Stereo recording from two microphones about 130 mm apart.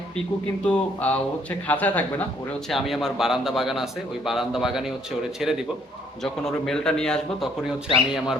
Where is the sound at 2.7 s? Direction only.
Centre (ahead or behind).